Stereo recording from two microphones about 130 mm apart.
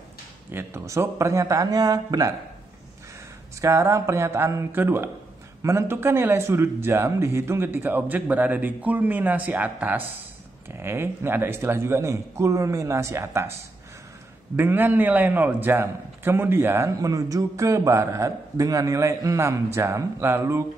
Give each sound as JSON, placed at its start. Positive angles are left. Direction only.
{"t": 0.5, "sound": "a man's voice", "side_deg": -20}
{"t": 3.6, "sound": "a man's voice", "side_deg": -25}
{"t": 14.6, "sound": "a man's voice", "side_deg": -15}